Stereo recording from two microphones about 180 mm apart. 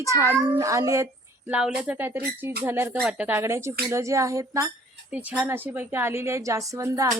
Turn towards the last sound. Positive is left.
turn(degrees=-15)  # may be behind; listen again after turning